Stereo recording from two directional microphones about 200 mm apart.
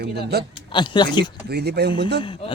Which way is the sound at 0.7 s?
25° left (ahead or behind).